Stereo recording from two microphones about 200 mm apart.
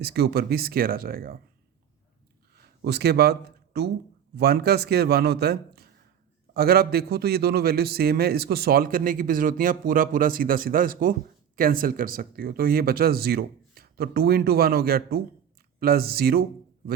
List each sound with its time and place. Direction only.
0.0 s a man's voice: 55° right (ahead or behind)
2.6 s a man's voice: 55° right (ahead or behind)